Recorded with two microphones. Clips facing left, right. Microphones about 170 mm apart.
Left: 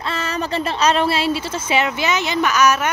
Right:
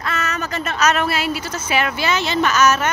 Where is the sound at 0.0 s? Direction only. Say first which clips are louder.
Left 1 dB; 30° left (ahead or behind).